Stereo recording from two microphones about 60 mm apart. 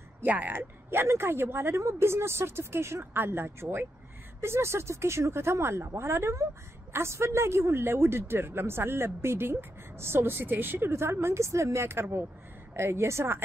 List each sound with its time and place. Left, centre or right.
0.2 s speech: right